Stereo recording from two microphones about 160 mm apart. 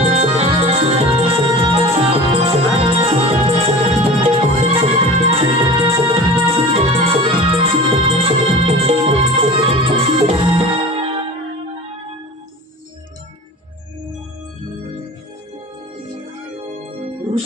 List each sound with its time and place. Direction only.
0.0 s music: 40° right (ahead or behind)